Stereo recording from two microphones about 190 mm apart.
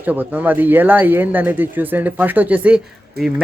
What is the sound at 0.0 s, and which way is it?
Speech, 10° right (ahead or behind).